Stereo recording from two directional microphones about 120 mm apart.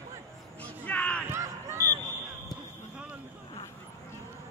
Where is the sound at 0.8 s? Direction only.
10° left (ahead or behind).